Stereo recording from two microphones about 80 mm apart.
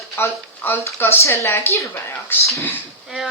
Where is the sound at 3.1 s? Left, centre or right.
Centre.